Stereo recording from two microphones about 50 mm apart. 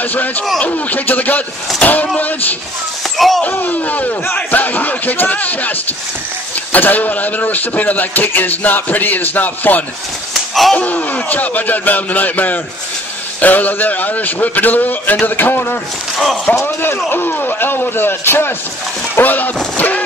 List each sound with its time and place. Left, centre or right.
0.0 s a man's voice: left
3.2 s speech: centre
3.4 s a man's voice: left
10.5 s slap: centre
10.8 s a man's voice: left
16.5 s speech: left
17.1 s a man's voice: left
19.1 s a man's voice: left